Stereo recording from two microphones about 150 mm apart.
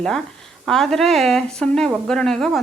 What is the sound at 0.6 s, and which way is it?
A woman's voice, centre (ahead or behind).